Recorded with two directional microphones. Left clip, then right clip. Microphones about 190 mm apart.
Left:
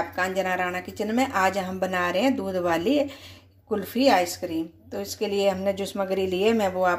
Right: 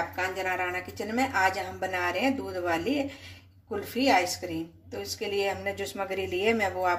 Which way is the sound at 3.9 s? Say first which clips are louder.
Left 3 dB; 40° left (ahead or behind).